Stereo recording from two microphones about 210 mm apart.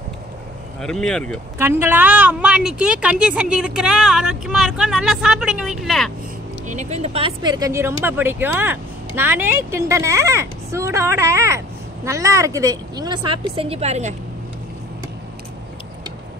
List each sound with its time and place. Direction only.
0.7 s a woman's voice: centre (ahead or behind)
1.6 s a woman's voice: 10° right (ahead or behind)
6.7 s a woman's voice: 35° right (ahead or behind)